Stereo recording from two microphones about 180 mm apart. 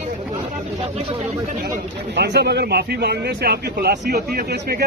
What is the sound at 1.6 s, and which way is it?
Speech, 65° right (ahead or behind).